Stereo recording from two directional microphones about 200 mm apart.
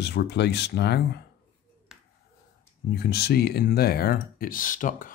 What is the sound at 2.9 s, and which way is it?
Speech, 50° left (ahead or behind).